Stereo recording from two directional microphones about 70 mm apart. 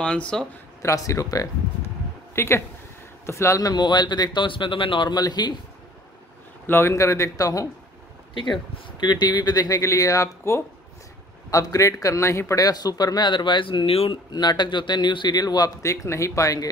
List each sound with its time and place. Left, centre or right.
0.0 s speech: centre
0.8 s a man's voice: left
2.3 s a man's voice: left
3.6 s a man's voice: left
5.0 s speech: left
6.6 s a man's voice: left
8.5 s a man's voice: left
12.6 s a man's voice: left
15.8 s a man's voice: left